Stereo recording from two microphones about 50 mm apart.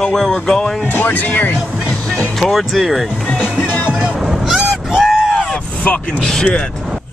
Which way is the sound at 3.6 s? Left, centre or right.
Left.